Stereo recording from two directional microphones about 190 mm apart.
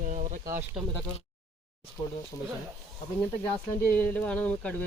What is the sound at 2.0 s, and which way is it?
Speech, 20° left (ahead or behind).